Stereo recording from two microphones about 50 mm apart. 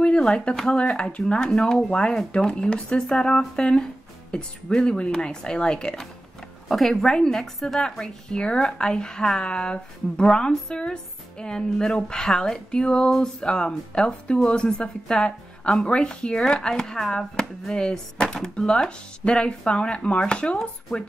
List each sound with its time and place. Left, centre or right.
0.0 s a woman's voice: centre